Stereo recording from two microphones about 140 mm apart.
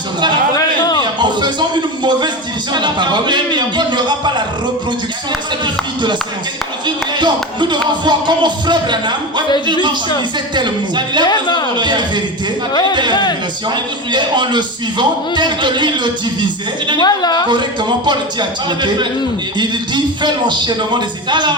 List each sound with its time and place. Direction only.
1.2 s a sound: 30° right (ahead or behind)
2.0 s music: 30° right (ahead or behind)
6.8 s music: 35° right (ahead or behind)
10.5 s music: 35° right (ahead or behind)
11.3 s speech: 30° left (ahead or behind)
11.8 s music: 35° right (ahead or behind)
13.7 s music: 35° right (ahead or behind)
17.0 s a woman's voice: 30° left (ahead or behind)
17.5 s music: 35° right (ahead or behind)